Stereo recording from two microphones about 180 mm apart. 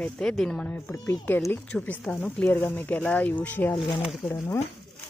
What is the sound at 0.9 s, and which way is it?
Speech, 20° left (ahead or behind).